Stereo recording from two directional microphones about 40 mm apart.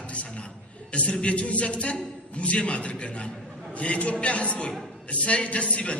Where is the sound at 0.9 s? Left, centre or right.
Left.